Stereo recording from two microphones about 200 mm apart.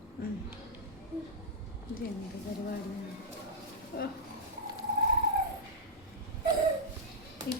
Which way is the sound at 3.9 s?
50° left (ahead or behind).